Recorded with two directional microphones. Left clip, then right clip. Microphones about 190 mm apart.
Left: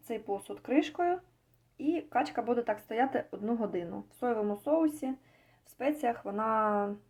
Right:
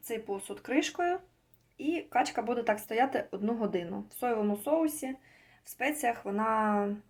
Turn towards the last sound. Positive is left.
turn(degrees=5)  # may be behind; listen again after turning